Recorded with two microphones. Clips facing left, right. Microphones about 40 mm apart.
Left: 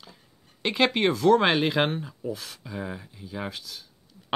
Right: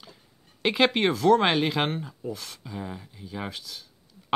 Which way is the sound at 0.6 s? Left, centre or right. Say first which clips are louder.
Right 1 dB; centre.